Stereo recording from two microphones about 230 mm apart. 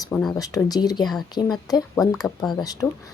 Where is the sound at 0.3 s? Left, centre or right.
Centre.